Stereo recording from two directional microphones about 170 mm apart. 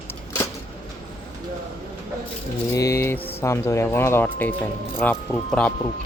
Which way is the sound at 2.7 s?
20° left (ahead or behind).